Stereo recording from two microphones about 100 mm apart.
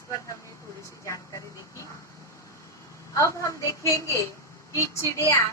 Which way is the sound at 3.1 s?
30° left (ahead or behind).